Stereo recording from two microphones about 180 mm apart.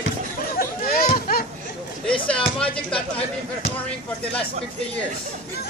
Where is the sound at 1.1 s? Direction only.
50° left (ahead or behind).